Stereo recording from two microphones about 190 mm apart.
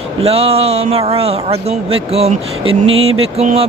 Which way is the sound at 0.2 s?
30° right (ahead or behind).